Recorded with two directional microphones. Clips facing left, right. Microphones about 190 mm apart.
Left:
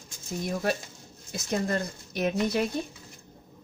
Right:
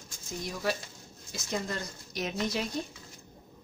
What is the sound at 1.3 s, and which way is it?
Speech, 55° left (ahead or behind).